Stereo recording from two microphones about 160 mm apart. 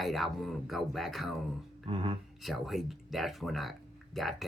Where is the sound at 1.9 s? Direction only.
35° right (ahead or behind).